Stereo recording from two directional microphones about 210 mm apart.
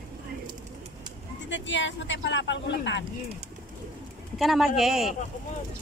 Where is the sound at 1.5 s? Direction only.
60° left (ahead or behind).